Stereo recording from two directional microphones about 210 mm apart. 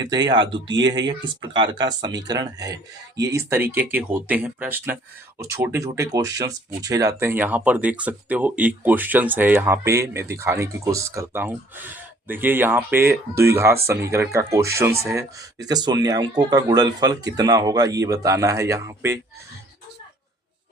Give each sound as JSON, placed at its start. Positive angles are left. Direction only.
{"t": 0.0, "sound": "speech", "side_deg": -20}